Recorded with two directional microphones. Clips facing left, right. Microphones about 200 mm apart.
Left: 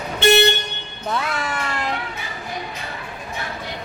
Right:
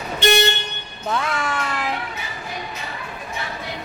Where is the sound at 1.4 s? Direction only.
Centre (ahead or behind).